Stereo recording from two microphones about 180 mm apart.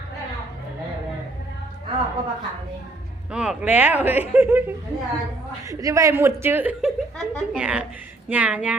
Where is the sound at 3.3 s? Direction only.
5° right (ahead or behind).